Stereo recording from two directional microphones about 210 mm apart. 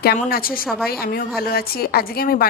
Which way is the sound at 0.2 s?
45° left (ahead or behind).